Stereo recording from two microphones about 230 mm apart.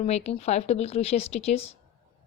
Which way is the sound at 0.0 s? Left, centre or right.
Left.